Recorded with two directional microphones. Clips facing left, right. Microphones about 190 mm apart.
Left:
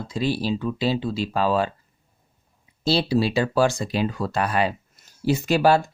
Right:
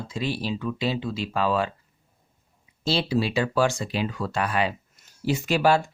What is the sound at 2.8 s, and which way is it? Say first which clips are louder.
Speech: left 3 dB; 35° left (ahead or behind).